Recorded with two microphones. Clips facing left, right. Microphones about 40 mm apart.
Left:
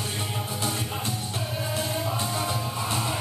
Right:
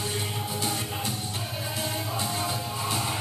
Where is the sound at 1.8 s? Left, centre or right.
Left.